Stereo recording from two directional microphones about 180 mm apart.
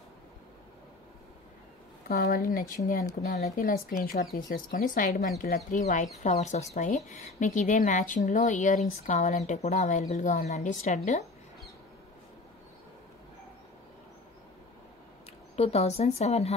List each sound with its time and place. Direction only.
2.0 s a woman's voice: 55° left (ahead or behind)
15.5 s a woman's voice: 35° left (ahead or behind)